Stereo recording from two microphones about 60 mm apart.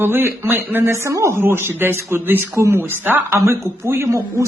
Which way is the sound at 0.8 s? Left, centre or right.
Right.